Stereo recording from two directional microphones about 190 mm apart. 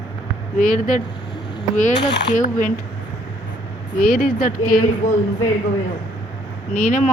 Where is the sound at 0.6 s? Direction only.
45° left (ahead or behind).